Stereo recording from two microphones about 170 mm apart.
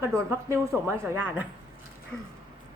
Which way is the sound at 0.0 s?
15° right (ahead or behind).